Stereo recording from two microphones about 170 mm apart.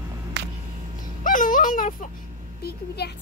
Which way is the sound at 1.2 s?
50° left (ahead or behind).